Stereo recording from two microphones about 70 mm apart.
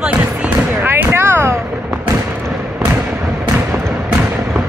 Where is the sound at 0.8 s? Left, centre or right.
Right.